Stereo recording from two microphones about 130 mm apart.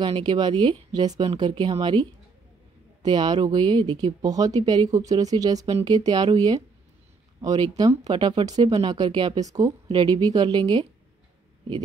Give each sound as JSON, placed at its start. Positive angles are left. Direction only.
{"t": 0.0, "sound": "speech", "side_deg": -40}